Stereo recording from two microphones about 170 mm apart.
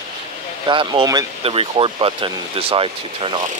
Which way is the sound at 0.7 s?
30° right (ahead or behind).